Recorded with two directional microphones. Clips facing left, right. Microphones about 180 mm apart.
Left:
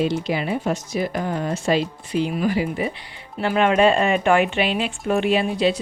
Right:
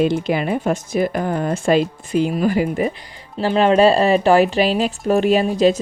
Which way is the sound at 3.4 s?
30° right (ahead or behind).